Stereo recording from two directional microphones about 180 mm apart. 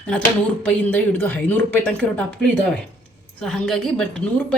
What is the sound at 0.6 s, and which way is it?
A woman's voice, 10° left (ahead or behind).